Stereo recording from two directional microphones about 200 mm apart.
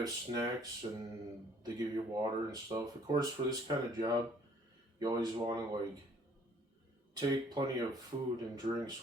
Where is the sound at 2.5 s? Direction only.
20° right (ahead or behind).